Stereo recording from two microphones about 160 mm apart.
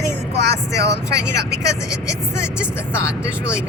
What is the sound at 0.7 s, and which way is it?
Speech, 20° left (ahead or behind).